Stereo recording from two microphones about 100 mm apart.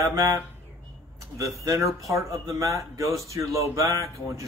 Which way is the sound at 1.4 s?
30° right (ahead or behind).